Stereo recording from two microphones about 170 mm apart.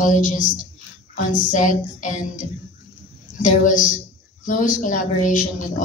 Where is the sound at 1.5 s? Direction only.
45° left (ahead or behind).